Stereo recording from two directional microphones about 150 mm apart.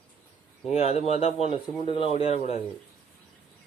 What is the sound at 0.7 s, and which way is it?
Speech, 45° left (ahead or behind).